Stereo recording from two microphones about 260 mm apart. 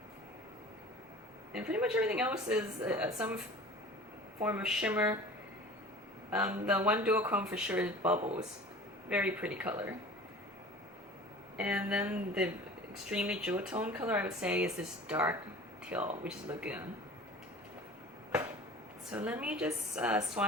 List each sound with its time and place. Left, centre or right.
1.5 s speech: centre
4.4 s speech: centre
6.3 s speech: centre
8.2 s speech: right
9.0 s speech: centre
11.5 s speech: centre
19.1 s speech: centre